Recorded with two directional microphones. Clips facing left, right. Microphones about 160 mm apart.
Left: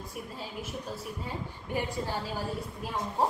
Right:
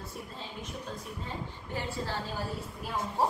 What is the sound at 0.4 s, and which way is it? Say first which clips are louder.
A woman's voice: left 3 dB; 5° left (ahead or behind).